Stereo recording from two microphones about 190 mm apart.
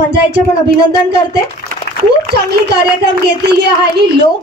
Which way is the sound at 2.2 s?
60° right (ahead or behind).